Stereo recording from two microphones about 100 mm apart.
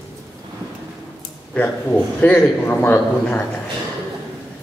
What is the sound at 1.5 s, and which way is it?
A man's voice, 15° left (ahead or behind).